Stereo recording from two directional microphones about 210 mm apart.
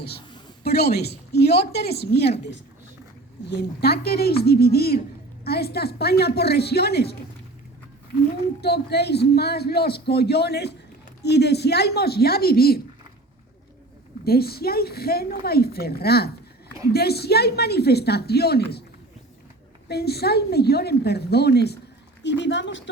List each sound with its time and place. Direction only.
0.6 s a man's voice: 50° left (ahead or behind)
3.5 s a man's voice: 50° left (ahead or behind)
8.6 s a man's voice: 50° left (ahead or behind)
14.3 s a man's voice: 45° left (ahead or behind)
19.9 s a man's voice: 50° left (ahead or behind)